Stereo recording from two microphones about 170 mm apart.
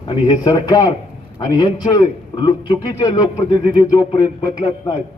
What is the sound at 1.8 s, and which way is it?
A man's voice, 25° left (ahead or behind).